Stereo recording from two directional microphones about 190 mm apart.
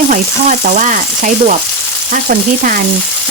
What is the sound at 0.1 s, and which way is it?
Frying, 40° right (ahead or behind).